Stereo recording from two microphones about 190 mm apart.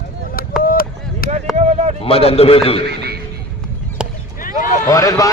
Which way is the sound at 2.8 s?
60° right (ahead or behind).